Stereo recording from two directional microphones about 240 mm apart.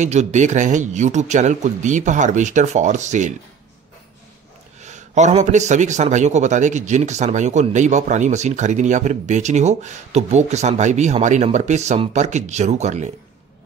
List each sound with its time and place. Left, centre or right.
0.0 s speech: right
4.8 s a man's voice: right